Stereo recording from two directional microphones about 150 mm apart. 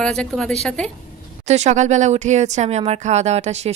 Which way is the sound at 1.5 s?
50° right (ahead or behind).